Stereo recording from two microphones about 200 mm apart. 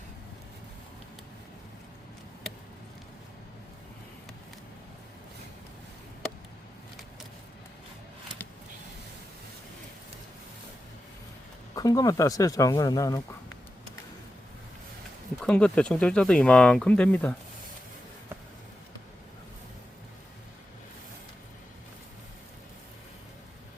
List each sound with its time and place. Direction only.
11.7 s speech: 20° left (ahead or behind)
15.4 s speech: 5° left (ahead or behind)